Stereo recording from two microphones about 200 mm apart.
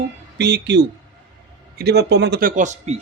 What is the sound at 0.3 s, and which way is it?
A man's voice, 55° right (ahead or behind).